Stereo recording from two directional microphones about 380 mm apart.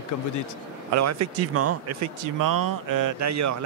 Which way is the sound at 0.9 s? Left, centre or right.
Right.